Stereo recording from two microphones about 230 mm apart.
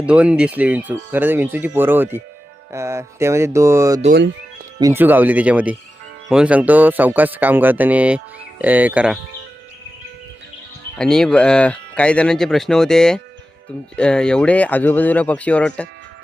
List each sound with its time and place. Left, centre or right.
0.0 s speech: centre
4.1 s speech: right
4.8 s speech: centre
10.9 s speech: centre